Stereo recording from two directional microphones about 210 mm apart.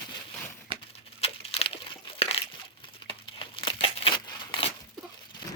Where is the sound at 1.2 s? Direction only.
30° left (ahead or behind).